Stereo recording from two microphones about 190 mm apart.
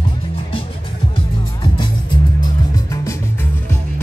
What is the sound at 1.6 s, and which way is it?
Music, 25° left (ahead or behind).